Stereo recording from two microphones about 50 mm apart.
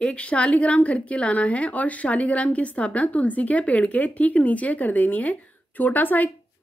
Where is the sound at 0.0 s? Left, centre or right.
Left.